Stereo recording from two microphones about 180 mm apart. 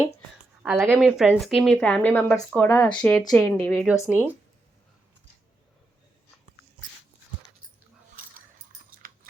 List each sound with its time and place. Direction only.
0.6 s speech: 10° right (ahead or behind); by 3.8 s 15° left (ahead or behind)
3.8 s speech: 5° right (ahead or behind)
8.2 s dog: 50° right (ahead or behind)
9.0 s a sound: 50° right (ahead or behind)